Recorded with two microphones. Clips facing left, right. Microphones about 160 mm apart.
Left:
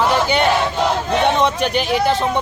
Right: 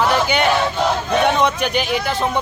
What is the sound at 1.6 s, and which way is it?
Speech, centre (ahead or behind).